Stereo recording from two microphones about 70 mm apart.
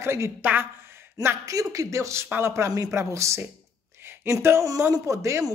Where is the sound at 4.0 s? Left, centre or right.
Right.